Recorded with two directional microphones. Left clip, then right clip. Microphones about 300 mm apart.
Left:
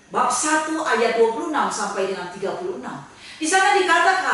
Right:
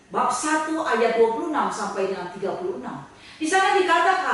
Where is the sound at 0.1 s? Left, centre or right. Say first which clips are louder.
Left 3 dB; centre.